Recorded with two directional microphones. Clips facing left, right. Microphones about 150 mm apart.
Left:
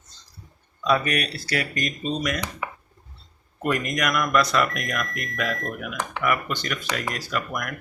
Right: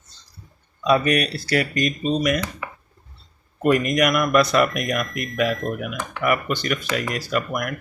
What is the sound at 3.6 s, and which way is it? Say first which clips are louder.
Speech: right 7 dB; 15° right (ahead or behind).